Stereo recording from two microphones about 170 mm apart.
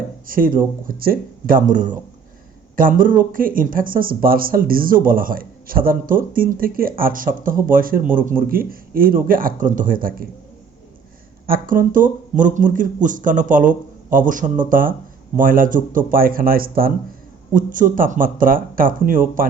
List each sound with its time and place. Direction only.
0.3 s speech: 55° right (ahead or behind)
11.4 s speech: 55° right (ahead or behind)